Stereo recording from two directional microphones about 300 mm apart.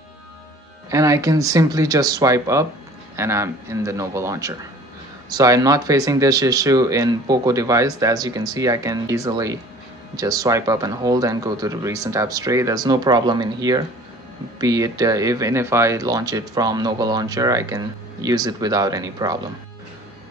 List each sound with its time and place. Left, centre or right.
0.8 s speech: centre